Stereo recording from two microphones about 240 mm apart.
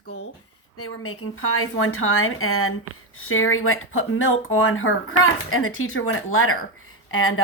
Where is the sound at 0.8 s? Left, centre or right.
Left.